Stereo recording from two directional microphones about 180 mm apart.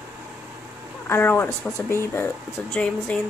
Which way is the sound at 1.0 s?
15° left (ahead or behind).